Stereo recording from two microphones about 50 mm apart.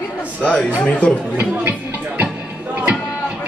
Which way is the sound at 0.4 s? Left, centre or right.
Left.